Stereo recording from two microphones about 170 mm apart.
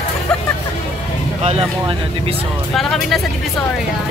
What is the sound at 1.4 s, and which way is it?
Speech, 35° right (ahead or behind).